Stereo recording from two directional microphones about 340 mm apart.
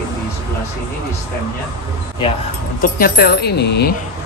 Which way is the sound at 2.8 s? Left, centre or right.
Left.